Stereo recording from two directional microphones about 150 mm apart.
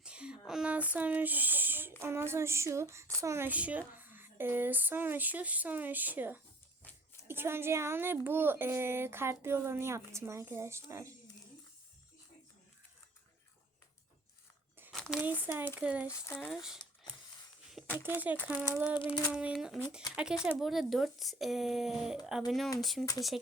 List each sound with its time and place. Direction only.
0.0 s a sound: 5° right (ahead or behind)
2.0 s a woman's voice: 15° right (ahead or behind)
14.9 s a sound: centre (ahead or behind)
15.3 s a woman's voice: 10° right (ahead or behind)
16.0 s speech: 20° left (ahead or behind)
16.5 s speech: 5° right (ahead or behind)
18.0 s a woman's voice: 10° right (ahead or behind)
18.9 s child singing: 30° left (ahead or behind)
19.3 s a woman's voice: 10° right (ahead or behind)